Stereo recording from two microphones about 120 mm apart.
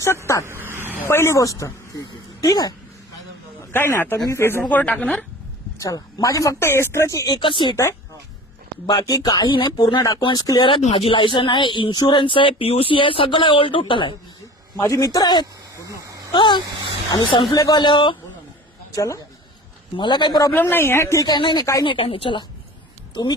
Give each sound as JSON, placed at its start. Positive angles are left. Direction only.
{"t": 0.4, "sound": "vehicle", "side_deg": -20}
{"t": 0.9, "sound": "speech", "side_deg": 20}
{"t": 3.7, "sound": "speech", "side_deg": 20}
{"t": 5.8, "sound": "speech", "side_deg": 30}
{"t": 8.9, "sound": "speech", "side_deg": 30}
{"t": 10.9, "sound": "speech", "side_deg": 45}
{"t": 14.8, "sound": "speech", "side_deg": 30}
{"t": 15.7, "sound": "a sound", "side_deg": -25}
{"t": 16.3, "sound": "speech", "side_deg": 40}
{"t": 18.9, "sound": "speech", "side_deg": 25}
{"t": 20.0, "sound": "speech", "side_deg": 40}
{"t": 20.5, "sound": "speech", "side_deg": 15}
{"t": 21.2, "sound": "speech", "side_deg": 40}
{"t": 21.8, "sound": "speech", "side_deg": 50}